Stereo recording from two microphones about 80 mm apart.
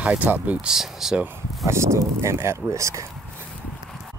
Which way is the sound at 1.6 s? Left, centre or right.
Right.